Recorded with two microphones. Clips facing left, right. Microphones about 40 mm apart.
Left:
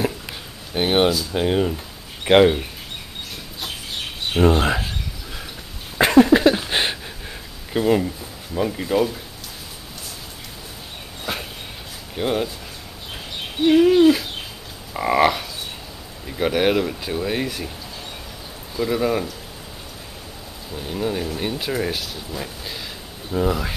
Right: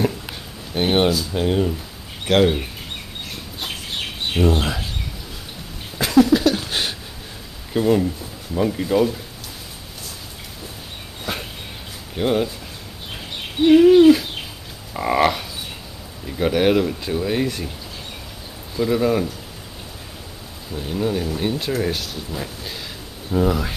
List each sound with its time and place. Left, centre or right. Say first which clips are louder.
0.0 s a sound: right 2 dB; centre
2.3 s speech: left 3 dB; left
4.4 s speech: left 3 dB; left
5.9 s a sound: left 2 dB; left
7.7 s speech: right 1 dB; centre
11.3 s dog: even; centre
12.2 s speech: right 2 dB; centre
13.7 s speech: right 3 dB; centre
18.8 s speech: right 2 dB; centre
20.7 s speech: right 2 dB; centre